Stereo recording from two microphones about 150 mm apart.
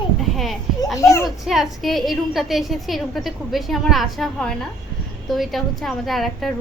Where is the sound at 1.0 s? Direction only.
20° left (ahead or behind).